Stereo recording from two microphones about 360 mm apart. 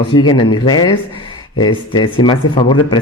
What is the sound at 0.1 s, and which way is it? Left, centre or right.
Speech, centre.